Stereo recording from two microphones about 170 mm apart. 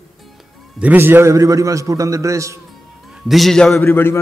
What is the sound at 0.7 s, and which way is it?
A man's voice, 10° right (ahead or behind).